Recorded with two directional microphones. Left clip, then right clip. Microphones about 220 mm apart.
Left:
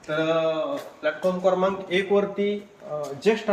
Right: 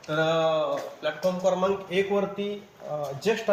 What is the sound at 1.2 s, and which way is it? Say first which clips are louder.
Speech: left 2 dB; 45° right (ahead or behind).